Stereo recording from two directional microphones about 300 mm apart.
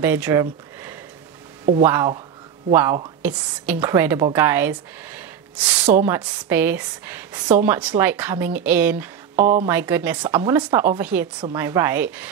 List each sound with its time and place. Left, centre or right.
0.0 s a woman's voice: centre